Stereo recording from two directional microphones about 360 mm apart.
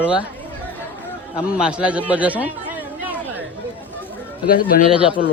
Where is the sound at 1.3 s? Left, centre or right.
Centre.